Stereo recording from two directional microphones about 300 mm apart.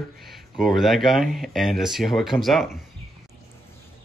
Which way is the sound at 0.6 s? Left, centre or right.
Centre.